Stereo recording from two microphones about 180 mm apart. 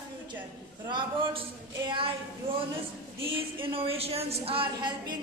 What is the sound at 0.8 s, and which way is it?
A woman's voice, 25° right (ahead or behind).